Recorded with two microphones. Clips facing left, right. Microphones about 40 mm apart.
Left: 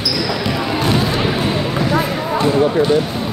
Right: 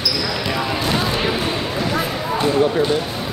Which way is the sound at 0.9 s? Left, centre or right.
Centre.